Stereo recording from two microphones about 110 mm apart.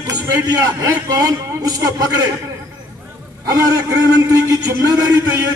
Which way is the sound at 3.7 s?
35° right (ahead or behind).